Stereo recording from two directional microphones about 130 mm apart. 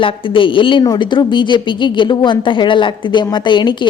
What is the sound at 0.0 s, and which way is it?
A woman's voice, 40° left (ahead or behind).